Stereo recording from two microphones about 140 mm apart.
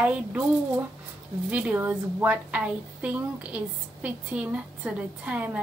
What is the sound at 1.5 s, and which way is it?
A woman's voice, 10° right (ahead or behind).